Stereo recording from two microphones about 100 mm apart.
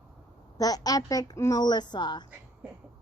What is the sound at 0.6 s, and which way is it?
A woman's voice, 40° left (ahead or behind).